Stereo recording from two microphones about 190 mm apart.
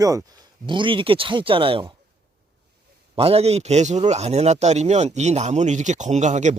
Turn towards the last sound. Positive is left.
turn(degrees=-40)  # may be behind; listen again after turning